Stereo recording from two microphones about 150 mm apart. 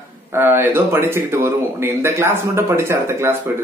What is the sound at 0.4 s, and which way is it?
Speech, 15° right (ahead or behind).